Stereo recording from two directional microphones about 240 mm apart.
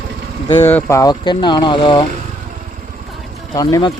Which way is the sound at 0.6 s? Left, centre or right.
Centre.